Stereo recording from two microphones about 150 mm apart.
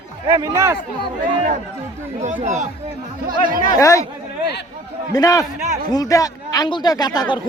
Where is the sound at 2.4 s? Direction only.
55° right (ahead or behind).